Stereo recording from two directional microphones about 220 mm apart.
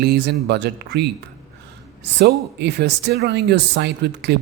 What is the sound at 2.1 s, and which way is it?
Speech, 50° right (ahead or behind).